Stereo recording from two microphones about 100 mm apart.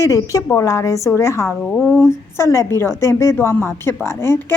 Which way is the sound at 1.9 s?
25° left (ahead or behind).